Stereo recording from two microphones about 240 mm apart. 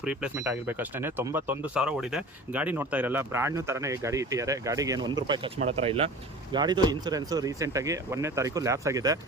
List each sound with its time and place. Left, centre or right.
0.0 s speech: centre